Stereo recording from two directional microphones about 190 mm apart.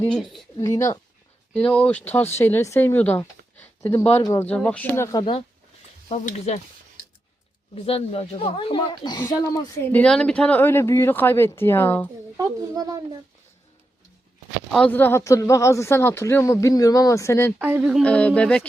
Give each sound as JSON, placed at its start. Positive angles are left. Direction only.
{"t": 0.0, "sound": "speech", "side_deg": 0}
{"t": 0.6, "sound": "speech", "side_deg": 15}
{"t": 1.5, "sound": "speech", "side_deg": 5}
{"t": 6.1, "sound": "speech", "side_deg": 35}
{"t": 7.8, "sound": "speech", "side_deg": 30}
{"t": 9.9, "sound": "speech", "side_deg": 5}
{"t": 12.4, "sound": "a woman's voice", "side_deg": -20}
{"t": 14.7, "sound": "speech", "side_deg": 5}
{"t": 17.6, "sound": "speech", "side_deg": -10}
{"t": 18.0, "sound": "speech", "side_deg": 5}